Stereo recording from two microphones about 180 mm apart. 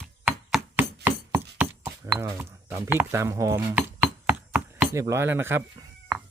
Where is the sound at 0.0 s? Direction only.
5° right (ahead or behind).